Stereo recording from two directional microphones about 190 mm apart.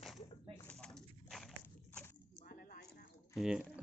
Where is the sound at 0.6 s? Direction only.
5° left (ahead or behind).